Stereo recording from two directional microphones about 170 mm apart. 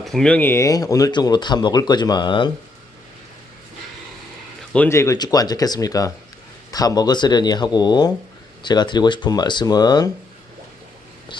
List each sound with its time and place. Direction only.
0.0 s speech: centre (ahead or behind); by 2.5 s 25° left (ahead or behind)
4.7 s speech: 10° left (ahead or behind)